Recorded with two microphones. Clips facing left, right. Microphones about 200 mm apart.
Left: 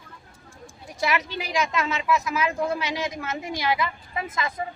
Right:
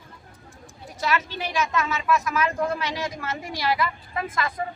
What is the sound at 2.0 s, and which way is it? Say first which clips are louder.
A woman's voice: right 1 dB; 10° left (ahead or behind).